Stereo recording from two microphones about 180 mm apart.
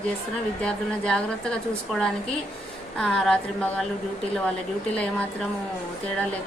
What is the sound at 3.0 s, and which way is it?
Speech, 5° left (ahead or behind).